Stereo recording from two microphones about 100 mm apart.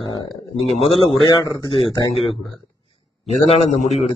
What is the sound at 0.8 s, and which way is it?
Speech, 70° left (ahead or behind).